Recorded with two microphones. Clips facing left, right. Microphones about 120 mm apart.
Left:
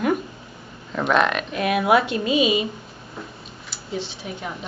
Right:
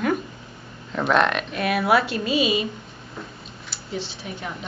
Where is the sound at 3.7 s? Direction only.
Centre (ahead or behind).